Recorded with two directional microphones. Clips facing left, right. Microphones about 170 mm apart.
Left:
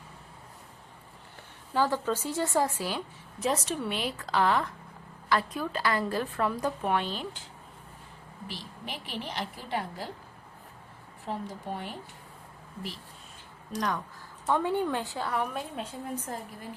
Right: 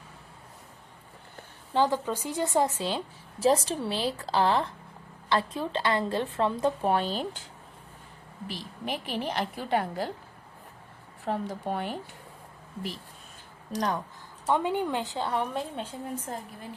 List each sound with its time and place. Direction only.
1.7 s a woman's voice: 20° right (ahead or behind); by 7.3 s 40° right (ahead or behind)
8.4 s a woman's voice: 50° right (ahead or behind)
11.3 s a woman's voice: 65° right (ahead or behind)
13.7 s a woman's voice: 30° right (ahead or behind)
14.4 s a woman's voice: 15° right (ahead or behind)